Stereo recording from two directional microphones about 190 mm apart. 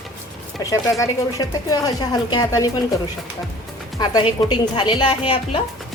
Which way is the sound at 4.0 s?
20° left (ahead or behind).